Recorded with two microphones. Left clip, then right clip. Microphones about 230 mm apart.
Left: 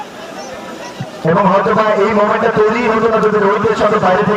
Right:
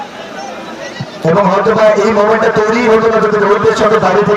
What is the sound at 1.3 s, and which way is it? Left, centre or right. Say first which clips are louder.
A man's voice: right 1 dB; left.